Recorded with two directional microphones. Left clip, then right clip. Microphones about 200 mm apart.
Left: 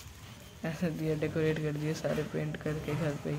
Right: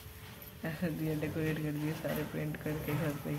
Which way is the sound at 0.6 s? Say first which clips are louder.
Left 2 dB; 15° left (ahead or behind).